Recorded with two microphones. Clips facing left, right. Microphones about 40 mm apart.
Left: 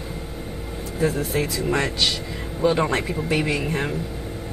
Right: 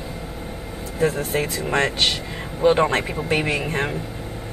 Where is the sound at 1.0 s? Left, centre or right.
Right.